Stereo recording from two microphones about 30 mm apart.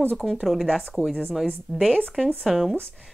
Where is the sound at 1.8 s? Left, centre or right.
Left.